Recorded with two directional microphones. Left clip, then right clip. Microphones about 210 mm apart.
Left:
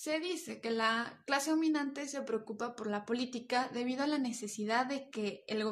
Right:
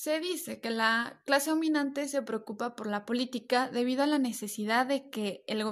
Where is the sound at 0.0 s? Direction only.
35° right (ahead or behind).